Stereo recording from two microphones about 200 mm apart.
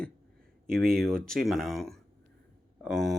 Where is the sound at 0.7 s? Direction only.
50° right (ahead or behind).